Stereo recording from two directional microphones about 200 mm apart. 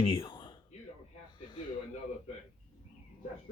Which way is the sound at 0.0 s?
25° left (ahead or behind).